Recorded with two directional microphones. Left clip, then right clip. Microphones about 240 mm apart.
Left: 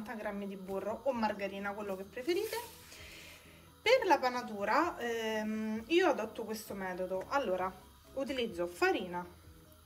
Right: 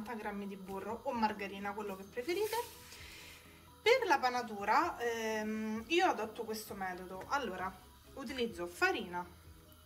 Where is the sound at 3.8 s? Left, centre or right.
Right.